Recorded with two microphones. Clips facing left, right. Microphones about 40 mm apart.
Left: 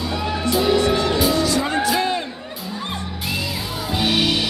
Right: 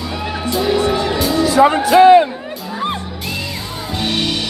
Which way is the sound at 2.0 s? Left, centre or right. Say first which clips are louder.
Right 15 dB; right.